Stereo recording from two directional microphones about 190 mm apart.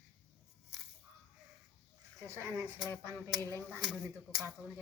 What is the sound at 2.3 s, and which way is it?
Speech, 15° right (ahead or behind).